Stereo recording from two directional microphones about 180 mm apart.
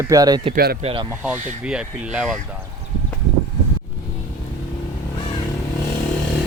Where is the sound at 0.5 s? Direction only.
60° right (ahead or behind).